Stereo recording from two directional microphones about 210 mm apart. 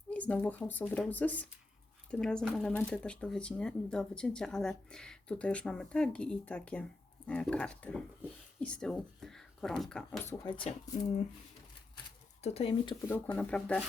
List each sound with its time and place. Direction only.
0.1 s speech: 5° left (ahead or behind)
10.4 s speech: 25° left (ahead or behind)
12.4 s speech: 30° left (ahead or behind)
13.3 s speech: 5° left (ahead or behind)